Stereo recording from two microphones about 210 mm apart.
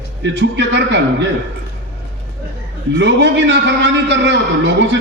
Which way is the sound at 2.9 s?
55° right (ahead or behind).